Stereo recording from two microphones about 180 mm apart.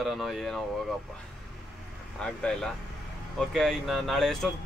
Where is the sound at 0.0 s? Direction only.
Centre (ahead or behind).